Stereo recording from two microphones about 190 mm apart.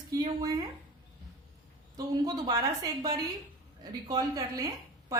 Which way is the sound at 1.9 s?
20° right (ahead or behind).